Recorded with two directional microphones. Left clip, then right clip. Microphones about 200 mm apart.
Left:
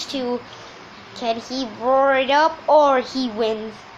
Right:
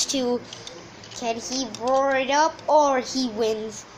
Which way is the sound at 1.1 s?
5° right (ahead or behind).